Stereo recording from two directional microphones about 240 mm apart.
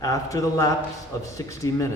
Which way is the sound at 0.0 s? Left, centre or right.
Centre.